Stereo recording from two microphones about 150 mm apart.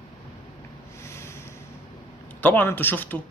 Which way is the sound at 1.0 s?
20° left (ahead or behind).